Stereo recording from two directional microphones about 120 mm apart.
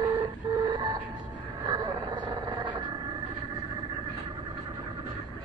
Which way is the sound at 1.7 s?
35° right (ahead or behind).